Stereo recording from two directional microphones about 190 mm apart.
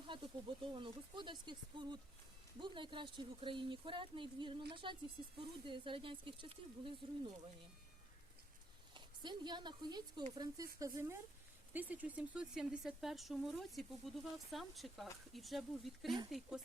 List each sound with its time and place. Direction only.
0.1 s a woman's voice: 25° right (ahead or behind)
9.0 s a woman's voice: 25° right (ahead or behind); by 16.1 s centre (ahead or behind)